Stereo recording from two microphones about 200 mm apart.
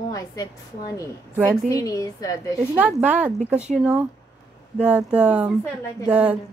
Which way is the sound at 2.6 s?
5° right (ahead or behind).